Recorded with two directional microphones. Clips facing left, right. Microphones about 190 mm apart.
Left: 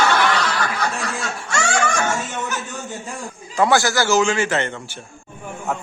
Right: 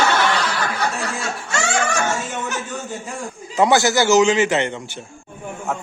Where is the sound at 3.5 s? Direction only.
20° right (ahead or behind).